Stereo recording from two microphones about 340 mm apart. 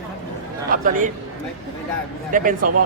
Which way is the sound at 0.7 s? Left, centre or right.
Right.